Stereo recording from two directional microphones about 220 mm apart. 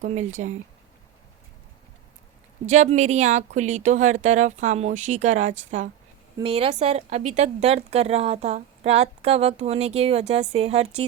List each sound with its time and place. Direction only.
0.0 s speech: 35° right (ahead or behind)
2.6 s a woman's voice: 30° right (ahead or behind)